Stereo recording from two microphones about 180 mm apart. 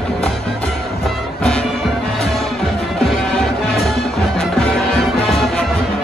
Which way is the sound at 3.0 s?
5° left (ahead or behind).